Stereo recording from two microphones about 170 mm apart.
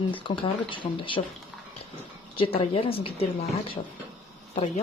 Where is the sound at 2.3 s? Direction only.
30° left (ahead or behind).